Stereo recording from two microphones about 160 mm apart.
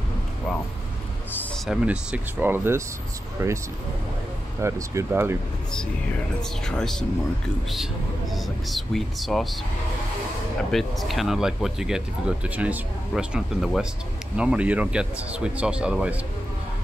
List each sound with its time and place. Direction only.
1.3 s a sound: 10° left (ahead or behind)
1.7 s speech: 5° right (ahead or behind)
4.6 s speech: 15° right (ahead or behind)
6.6 s speech: 5° left (ahead or behind)
10.7 s speech: centre (ahead or behind)